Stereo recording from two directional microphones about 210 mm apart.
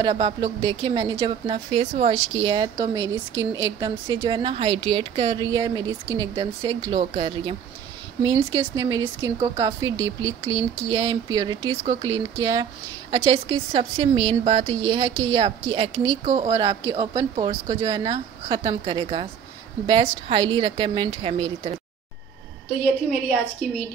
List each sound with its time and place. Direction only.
0.0 s speech: 20° right (ahead or behind)
23.6 s a woman's voice: 5° left (ahead or behind)